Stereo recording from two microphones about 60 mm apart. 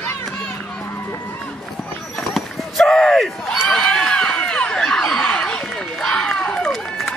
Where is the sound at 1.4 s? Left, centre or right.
Centre.